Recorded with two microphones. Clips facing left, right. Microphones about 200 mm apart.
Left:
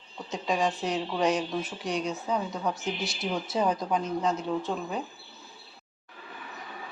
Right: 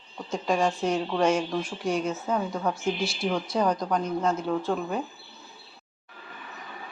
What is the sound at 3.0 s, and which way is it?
Speech, 20° left (ahead or behind).